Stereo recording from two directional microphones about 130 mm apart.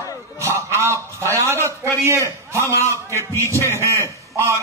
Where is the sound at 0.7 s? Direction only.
20° right (ahead or behind).